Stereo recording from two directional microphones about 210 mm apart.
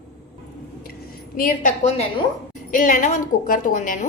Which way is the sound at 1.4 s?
40° left (ahead or behind).